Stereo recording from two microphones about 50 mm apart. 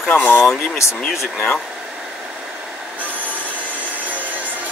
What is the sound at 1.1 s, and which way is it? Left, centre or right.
Speech, centre.